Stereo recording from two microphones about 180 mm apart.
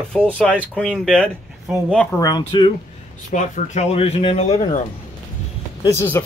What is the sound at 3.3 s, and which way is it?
Speech, 40° left (ahead or behind).